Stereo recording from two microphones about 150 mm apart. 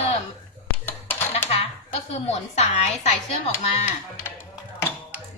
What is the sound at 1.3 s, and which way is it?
Coin, 45° left (ahead or behind).